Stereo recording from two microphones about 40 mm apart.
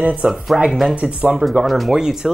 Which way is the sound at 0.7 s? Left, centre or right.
Centre.